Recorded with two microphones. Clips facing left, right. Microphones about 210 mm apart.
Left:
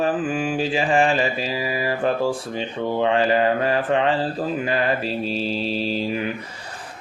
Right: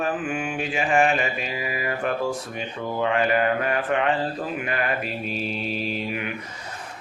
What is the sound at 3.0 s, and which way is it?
Mantra, 30° left (ahead or behind).